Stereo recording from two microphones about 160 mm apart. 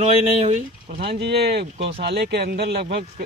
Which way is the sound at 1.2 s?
90° right.